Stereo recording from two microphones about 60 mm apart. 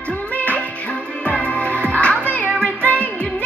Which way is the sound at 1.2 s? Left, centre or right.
Left.